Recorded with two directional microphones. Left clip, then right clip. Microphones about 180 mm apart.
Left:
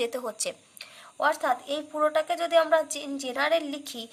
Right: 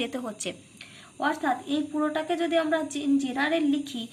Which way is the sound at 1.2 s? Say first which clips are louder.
Left 2 dB; 55° left (ahead or behind).